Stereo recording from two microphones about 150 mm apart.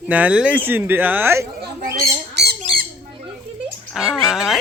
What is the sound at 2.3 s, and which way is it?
Squawk, 90° right.